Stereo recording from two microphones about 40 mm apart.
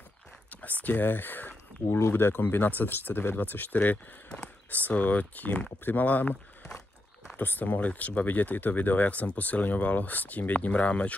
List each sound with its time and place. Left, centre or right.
0.5 s a sound: left
0.8 s speech: left
1.9 s speech: left
7.3 s speech: left